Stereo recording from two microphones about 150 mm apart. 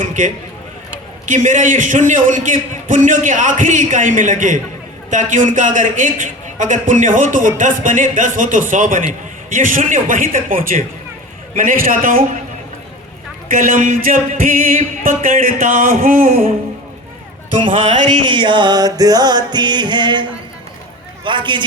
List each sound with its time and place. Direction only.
0.0 s a sound: 60° right (ahead or behind)
1.2 s a man's voice: 60° right (ahead or behind)
13.5 s speech: 65° right (ahead or behind)
17.8 s a man's voice: 55° right (ahead or behind)
18.3 s music: 30° right (ahead or behind)
21.2 s a man's voice: 30° right (ahead or behind)